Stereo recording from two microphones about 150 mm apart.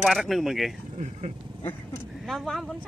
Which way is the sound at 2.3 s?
Centre (ahead or behind).